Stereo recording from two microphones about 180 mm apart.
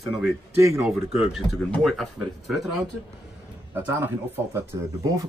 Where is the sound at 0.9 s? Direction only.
Centre (ahead or behind).